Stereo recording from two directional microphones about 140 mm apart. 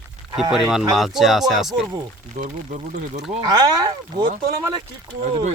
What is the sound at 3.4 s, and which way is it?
Speech, 30° right (ahead or behind).